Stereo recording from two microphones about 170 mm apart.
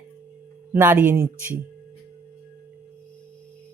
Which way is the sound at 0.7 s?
10° right (ahead or behind).